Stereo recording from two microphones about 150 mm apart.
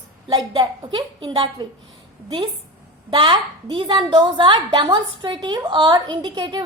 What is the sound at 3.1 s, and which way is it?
A woman's voice, 30° right (ahead or behind).